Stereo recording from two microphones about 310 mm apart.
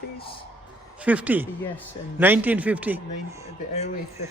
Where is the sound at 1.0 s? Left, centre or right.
Centre.